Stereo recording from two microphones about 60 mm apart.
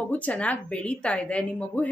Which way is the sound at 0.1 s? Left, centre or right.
Left.